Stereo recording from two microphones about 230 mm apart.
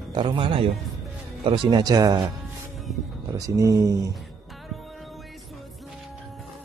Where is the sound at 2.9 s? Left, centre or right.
Centre.